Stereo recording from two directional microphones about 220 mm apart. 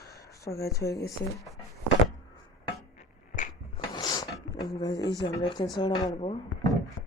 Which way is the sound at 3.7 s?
20° left (ahead or behind).